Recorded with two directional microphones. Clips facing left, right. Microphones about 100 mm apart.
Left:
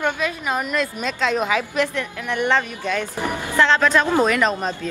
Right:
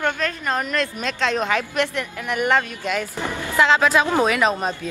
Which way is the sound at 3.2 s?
15° left (ahead or behind).